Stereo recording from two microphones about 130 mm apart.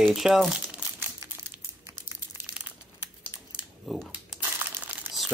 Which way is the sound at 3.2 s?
10° right (ahead or behind).